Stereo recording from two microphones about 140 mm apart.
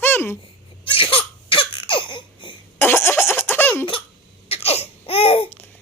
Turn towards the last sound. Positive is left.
turn(degrees=40)  # may be behind; listen again after turning